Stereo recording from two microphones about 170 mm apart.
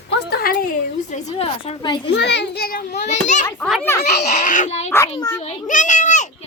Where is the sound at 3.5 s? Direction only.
Centre (ahead or behind).